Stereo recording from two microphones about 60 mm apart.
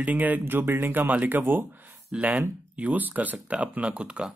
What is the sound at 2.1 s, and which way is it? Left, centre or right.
Speech, right.